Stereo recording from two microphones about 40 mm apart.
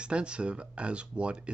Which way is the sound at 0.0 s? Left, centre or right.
Right.